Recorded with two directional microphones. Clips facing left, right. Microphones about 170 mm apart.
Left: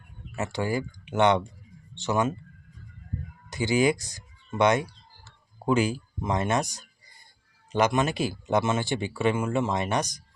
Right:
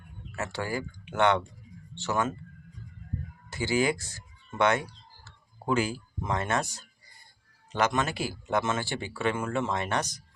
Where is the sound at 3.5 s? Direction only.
15° left (ahead or behind).